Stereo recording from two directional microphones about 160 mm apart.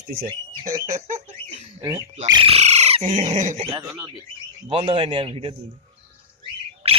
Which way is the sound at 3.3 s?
50° right (ahead or behind).